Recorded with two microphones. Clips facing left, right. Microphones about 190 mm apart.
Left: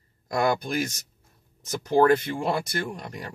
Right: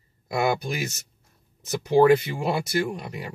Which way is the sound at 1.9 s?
10° right (ahead or behind).